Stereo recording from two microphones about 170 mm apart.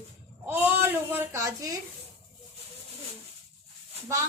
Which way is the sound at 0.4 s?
15° right (ahead or behind).